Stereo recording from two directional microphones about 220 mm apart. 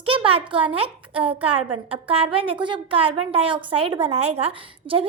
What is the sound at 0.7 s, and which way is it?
A woman's voice, 25° right (ahead or behind).